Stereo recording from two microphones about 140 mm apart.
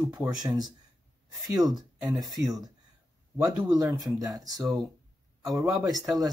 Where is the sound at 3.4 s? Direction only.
30° right (ahead or behind).